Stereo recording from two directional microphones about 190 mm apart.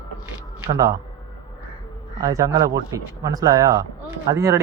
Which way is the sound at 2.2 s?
15° right (ahead or behind).